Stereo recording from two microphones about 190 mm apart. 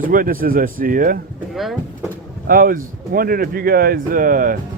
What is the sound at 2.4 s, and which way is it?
Speech, 50° right (ahead or behind).